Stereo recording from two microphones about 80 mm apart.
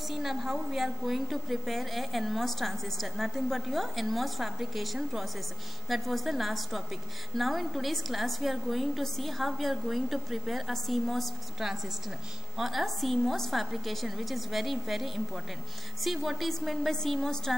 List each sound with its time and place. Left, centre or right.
0.1 s a woman's voice: centre